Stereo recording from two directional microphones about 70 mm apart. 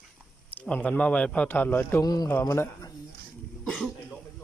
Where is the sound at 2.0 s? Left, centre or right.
Left.